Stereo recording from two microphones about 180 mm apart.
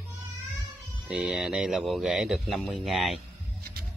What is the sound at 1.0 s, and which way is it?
A man's voice, 5° right (ahead or behind).